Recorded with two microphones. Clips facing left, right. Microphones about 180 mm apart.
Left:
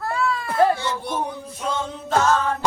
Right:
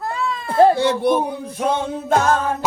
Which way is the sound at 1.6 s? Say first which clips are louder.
Right 6 dB; 60° right (ahead or behind).